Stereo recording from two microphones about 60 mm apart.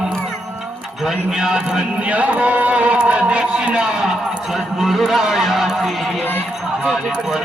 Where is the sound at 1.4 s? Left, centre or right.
Centre.